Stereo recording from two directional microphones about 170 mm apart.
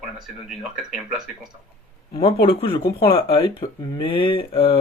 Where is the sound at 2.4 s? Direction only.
30° left (ahead or behind).